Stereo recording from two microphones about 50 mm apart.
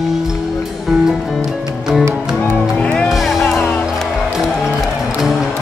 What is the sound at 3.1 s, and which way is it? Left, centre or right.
Music, centre.